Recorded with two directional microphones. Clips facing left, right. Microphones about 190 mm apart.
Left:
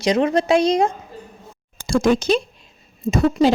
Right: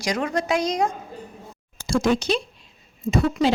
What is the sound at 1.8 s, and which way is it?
A woman's voice, 50° left (ahead or behind).